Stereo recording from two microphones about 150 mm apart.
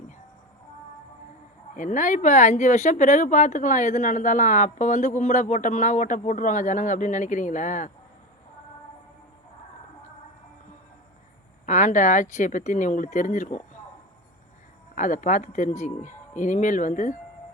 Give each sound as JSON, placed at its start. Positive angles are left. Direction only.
{"t": 1.7, "sound": "speech", "side_deg": 60}
{"t": 11.6, "sound": "speech", "side_deg": 55}
{"t": 14.9, "sound": "speech", "side_deg": 55}